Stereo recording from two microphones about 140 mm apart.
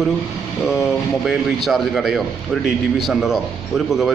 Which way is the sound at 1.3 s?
Centre (ahead or behind).